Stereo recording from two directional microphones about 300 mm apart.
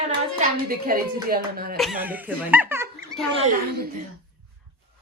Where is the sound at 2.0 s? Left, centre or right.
Centre.